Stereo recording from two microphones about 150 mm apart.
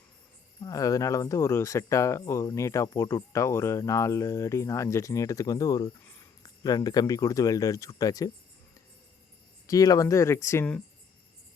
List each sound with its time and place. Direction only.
0.6 s speech: 25° left (ahead or behind)
9.6 s speech: 25° left (ahead or behind)